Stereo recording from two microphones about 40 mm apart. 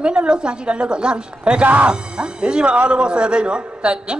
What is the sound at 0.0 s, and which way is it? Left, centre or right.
A man's voice, right.